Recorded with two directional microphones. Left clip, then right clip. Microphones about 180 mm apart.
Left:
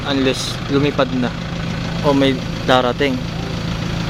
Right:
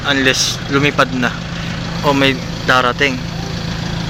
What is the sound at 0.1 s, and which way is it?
Speech, 5° left (ahead or behind).